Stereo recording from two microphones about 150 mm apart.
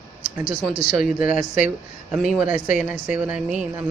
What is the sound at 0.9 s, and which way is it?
Speech, 5° right (ahead or behind).